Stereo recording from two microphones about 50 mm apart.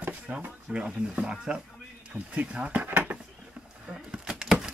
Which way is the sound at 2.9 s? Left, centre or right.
Right.